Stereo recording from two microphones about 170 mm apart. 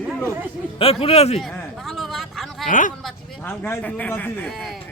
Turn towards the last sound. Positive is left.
turn(degrees=0)  # may be behind; listen again after turning